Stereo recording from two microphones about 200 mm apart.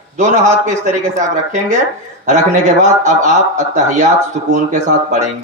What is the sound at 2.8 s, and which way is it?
A man's voice, 35° right (ahead or behind).